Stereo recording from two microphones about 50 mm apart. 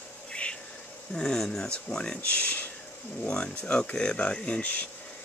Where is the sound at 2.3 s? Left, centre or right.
Left.